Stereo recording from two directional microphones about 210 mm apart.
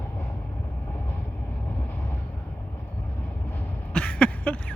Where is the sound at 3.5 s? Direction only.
5° left (ahead or behind).